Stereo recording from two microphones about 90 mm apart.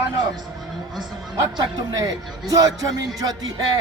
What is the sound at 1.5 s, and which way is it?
Speech, 45° right (ahead or behind).